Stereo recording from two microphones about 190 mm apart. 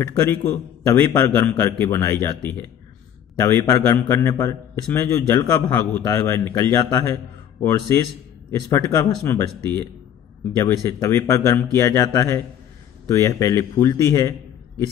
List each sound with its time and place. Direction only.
0.0 s a man's voice: 15° left (ahead or behind)
10.6 s a man's voice: 15° left (ahead or behind)